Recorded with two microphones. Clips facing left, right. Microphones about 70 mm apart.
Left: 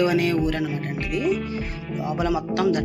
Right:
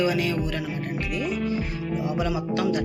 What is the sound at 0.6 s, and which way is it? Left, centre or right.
Speech, centre.